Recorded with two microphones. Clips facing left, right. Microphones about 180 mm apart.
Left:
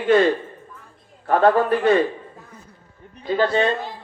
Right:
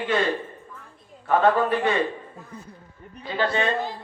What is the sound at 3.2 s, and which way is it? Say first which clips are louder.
Speech: left 5 dB; 40° left (ahead or behind).